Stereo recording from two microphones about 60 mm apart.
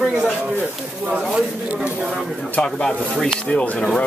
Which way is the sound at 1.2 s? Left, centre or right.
Centre.